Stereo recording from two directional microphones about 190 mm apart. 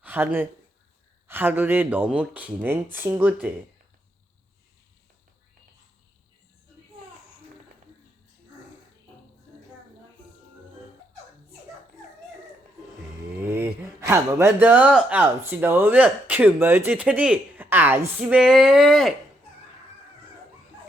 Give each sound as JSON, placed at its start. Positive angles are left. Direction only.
{"t": 0.0, "sound": "speech", "side_deg": -10}
{"t": 14.1, "sound": "speech", "side_deg": -15}